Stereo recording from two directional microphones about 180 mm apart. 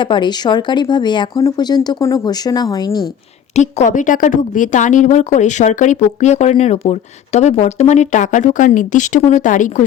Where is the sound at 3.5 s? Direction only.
40° left (ahead or behind).